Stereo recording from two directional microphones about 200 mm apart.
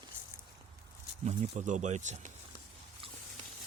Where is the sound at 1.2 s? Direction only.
35° right (ahead or behind).